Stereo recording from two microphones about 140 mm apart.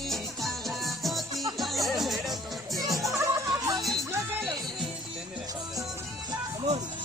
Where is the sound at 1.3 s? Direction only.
25° right (ahead or behind).